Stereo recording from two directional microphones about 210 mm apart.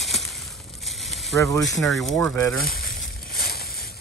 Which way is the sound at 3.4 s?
45° left (ahead or behind).